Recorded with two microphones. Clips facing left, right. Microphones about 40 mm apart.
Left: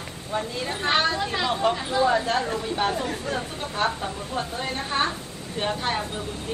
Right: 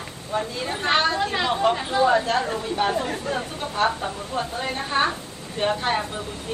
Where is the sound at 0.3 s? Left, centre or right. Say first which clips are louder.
Right 2 dB; centre.